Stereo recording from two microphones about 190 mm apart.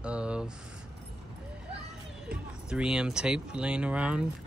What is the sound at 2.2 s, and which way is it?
Speech, 5° right (ahead or behind).